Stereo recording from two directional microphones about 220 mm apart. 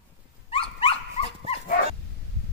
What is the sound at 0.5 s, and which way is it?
Dog, 25° left (ahead or behind).